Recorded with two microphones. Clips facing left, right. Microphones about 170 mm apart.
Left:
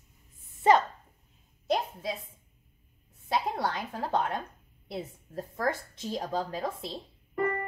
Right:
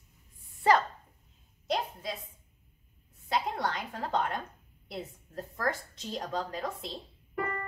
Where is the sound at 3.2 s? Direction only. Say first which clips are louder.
Left 2 dB; centre (ahead or behind).